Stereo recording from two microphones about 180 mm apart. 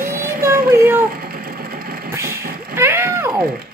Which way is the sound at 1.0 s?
55° right (ahead or behind).